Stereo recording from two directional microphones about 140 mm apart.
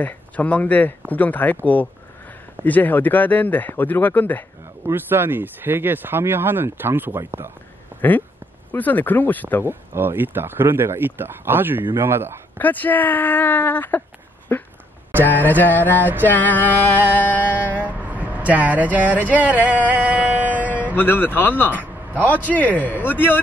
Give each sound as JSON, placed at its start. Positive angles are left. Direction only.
{"t": 0.0, "sound": "speech", "side_deg": 10}
{"t": 4.8, "sound": "speech", "side_deg": -15}
{"t": 7.9, "sound": "a sound", "side_deg": -15}
{"t": 8.7, "sound": "speech", "side_deg": 10}
{"t": 9.7, "sound": "speech", "side_deg": -15}
{"t": 12.5, "sound": "speech", "side_deg": 10}
{"t": 14.5, "sound": "a sound", "side_deg": 15}
{"t": 15.2, "sound": "speech", "side_deg": 15}
{"t": 16.0, "sound": "speech", "side_deg": -15}
{"t": 16.3, "sound": "speech", "side_deg": 10}
{"t": 17.7, "sound": "speech", "side_deg": -10}
{"t": 19.6, "sound": "a sound", "side_deg": -10}
{"t": 20.9, "sound": "speech", "side_deg": 15}